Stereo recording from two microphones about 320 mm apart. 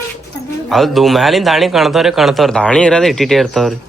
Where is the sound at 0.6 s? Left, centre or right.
Centre.